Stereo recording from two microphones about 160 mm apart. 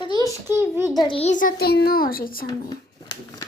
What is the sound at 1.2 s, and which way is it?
A child's voice, 55° left (ahead or behind).